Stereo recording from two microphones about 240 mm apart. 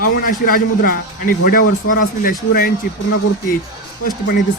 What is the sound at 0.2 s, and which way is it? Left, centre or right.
Speech, left.